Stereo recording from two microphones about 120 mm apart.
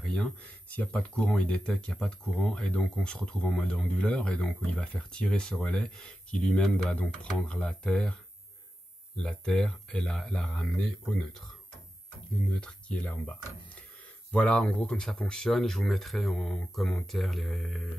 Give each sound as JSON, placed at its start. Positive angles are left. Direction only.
{"t": 0.0, "sound": "speech", "side_deg": 5}
{"t": 12.5, "sound": "speech", "side_deg": 10}